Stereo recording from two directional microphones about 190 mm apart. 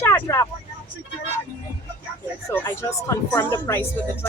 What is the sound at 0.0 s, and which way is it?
Vehicle, 15° left (ahead or behind).